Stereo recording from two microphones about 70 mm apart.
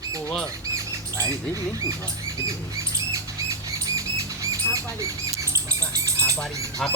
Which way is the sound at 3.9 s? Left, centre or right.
Right.